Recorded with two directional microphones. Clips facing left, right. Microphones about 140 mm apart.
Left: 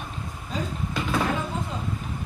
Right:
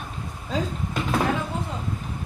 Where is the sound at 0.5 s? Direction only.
90° right.